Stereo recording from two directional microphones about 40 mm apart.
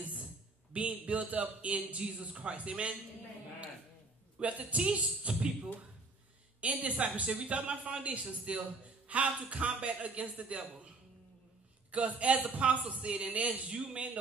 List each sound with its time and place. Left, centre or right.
0.7 s a man's voice: right
4.4 s a man's voice: right
4.8 s speech: right
6.6 s a man's voice: right
11.9 s a man's voice: right
13.7 s speech: right